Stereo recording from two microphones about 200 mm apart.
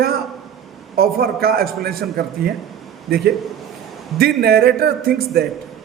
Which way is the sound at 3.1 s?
50° right (ahead or behind).